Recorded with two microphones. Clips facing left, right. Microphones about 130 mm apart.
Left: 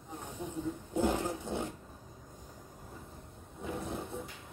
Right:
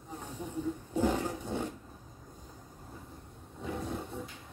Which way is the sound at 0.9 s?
15° left (ahead or behind).